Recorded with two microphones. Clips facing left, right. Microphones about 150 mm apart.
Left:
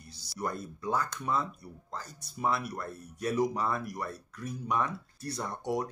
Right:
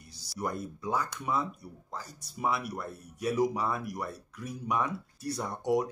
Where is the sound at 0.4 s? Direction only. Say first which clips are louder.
Right 1 dB; 10° right (ahead or behind).